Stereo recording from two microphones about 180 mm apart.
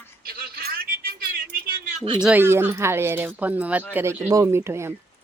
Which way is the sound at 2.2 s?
10° right (ahead or behind).